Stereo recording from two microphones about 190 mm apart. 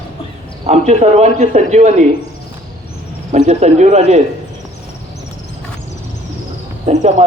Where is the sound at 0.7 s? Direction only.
35° right (ahead or behind).